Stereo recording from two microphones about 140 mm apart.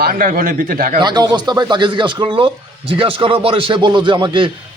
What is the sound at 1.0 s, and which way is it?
A man's voice, 30° right (ahead or behind).